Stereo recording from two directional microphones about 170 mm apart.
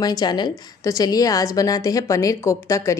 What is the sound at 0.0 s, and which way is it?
A woman's voice, 25° left (ahead or behind).